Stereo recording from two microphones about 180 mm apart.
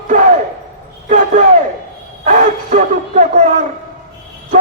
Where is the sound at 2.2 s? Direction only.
45° right (ahead or behind).